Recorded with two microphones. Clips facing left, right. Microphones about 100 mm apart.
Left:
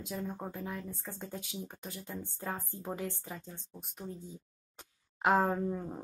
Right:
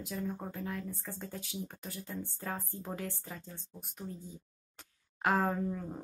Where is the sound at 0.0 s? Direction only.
20° left (ahead or behind).